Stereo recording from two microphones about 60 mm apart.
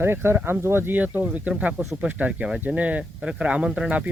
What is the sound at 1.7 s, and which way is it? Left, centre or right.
Speech, centre.